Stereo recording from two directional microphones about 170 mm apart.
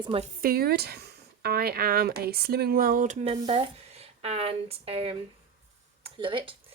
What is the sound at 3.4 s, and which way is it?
Speech, 30° right (ahead or behind).